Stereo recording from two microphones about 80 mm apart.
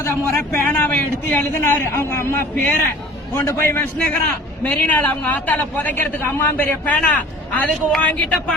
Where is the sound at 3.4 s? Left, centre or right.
Left.